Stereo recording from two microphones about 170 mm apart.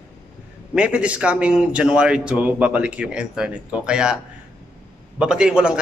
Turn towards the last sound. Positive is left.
turn(degrees=-5)  # may be behind; listen again after turning